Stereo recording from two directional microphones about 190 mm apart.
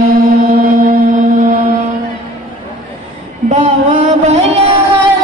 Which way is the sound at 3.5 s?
40° right (ahead or behind).